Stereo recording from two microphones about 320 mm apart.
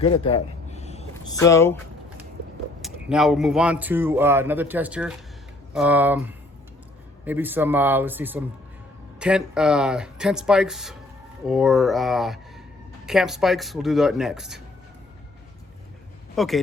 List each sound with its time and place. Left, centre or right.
0.0 s speech: centre
2.8 s speech: centre
16.3 s speech: centre